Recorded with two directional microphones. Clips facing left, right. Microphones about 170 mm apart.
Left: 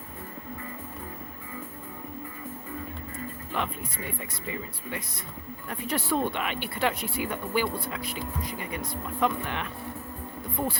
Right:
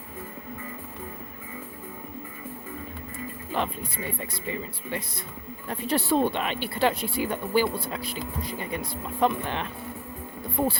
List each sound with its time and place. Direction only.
3.5 s speech: 30° right (ahead or behind)
5.6 s speech: 30° right (ahead or behind)